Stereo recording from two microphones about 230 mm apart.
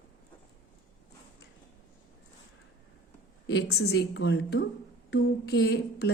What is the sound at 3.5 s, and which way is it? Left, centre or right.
A woman's voice, left.